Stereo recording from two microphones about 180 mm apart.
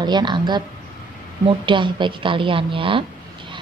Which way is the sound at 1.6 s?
25° right (ahead or behind).